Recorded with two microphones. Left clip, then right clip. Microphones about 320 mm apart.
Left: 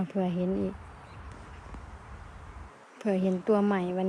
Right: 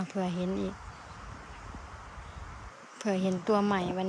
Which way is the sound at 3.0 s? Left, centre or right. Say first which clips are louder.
Left 2 dB; centre.